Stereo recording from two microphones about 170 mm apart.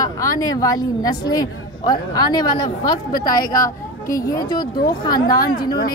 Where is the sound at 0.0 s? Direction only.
20° left (ahead or behind).